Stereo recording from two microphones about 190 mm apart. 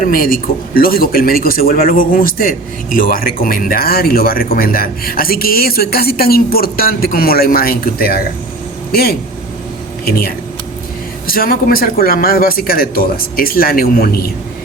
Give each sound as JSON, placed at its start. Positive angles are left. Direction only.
{"t": 0.0, "sound": "speech", "side_deg": 50}
{"t": 11.3, "sound": "speech", "side_deg": 50}